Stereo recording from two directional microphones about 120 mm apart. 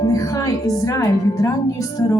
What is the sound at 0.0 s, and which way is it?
A woman's voice, 30° left (ahead or behind).